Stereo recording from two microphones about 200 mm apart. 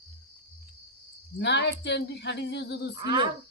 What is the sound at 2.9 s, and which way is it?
Cricket, 25° right (ahead or behind).